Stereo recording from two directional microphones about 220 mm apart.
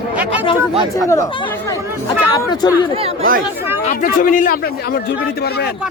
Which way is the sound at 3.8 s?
35° left (ahead or behind).